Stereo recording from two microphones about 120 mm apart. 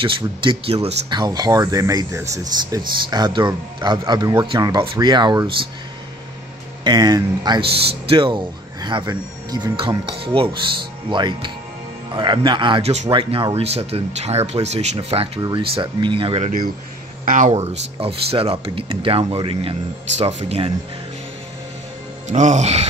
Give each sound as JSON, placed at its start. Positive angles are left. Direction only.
{"t": 0.0, "sound": "speech", "side_deg": -45}
{"t": 1.1, "sound": "speech", "side_deg": -35}
{"t": 6.8, "sound": "speech", "side_deg": -35}
{"t": 7.6, "sound": "speech", "side_deg": -50}
{"t": 12.8, "sound": "speech", "side_deg": -70}
{"t": 13.1, "sound": "speech", "side_deg": -50}
{"t": 15.4, "sound": "speech", "side_deg": -45}
{"t": 17.2, "sound": "speech", "side_deg": -90}
{"t": 18.0, "sound": "speech", "side_deg": -50}
{"t": 20.2, "sound": "speech", "side_deg": -65}
{"t": 22.3, "sound": "speech", "side_deg": -85}